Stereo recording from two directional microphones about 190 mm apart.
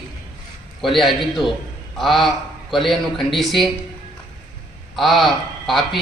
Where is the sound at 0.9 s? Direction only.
Centre (ahead or behind).